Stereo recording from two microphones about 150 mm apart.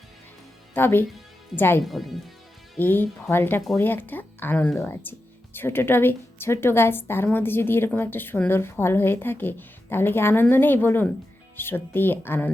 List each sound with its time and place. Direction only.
0.7 s a woman's voice: 15° left (ahead or behind)
1.8 s speech: centre (ahead or behind)
2.7 s a woman's voice: 15° left (ahead or behind)